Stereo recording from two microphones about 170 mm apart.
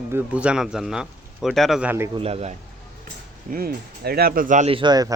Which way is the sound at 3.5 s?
60° right (ahead or behind).